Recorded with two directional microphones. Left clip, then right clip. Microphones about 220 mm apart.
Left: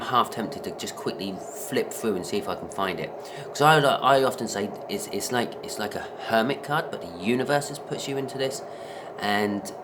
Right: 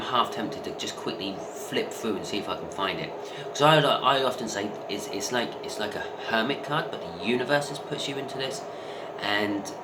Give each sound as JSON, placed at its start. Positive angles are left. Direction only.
{"t": 0.1, "sound": "speech", "side_deg": 50}
{"t": 2.3, "sound": "speech", "side_deg": 55}